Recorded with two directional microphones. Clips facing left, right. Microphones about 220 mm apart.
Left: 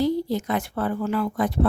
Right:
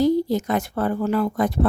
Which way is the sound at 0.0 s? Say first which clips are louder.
Right 4 dB; 45° right (ahead or behind).